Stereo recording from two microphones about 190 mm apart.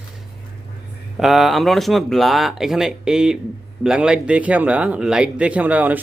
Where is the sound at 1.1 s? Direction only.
Centre (ahead or behind).